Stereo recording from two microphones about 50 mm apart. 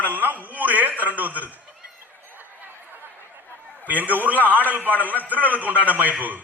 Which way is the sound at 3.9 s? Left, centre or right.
Right.